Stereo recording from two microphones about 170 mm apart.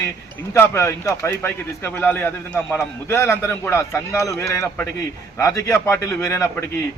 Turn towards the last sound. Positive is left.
turn(degrees=15)  # may be behind; listen again after turning